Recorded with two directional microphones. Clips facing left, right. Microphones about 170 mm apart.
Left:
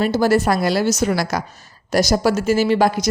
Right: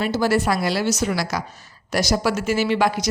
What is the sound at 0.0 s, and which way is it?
A woman's voice, 45° left (ahead or behind).